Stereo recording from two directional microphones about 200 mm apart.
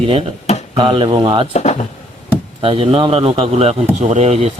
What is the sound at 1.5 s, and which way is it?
Speech, 35° left (ahead or behind).